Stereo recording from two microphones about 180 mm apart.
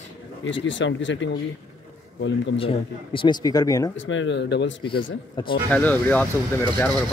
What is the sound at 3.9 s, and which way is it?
Speech, 90° left.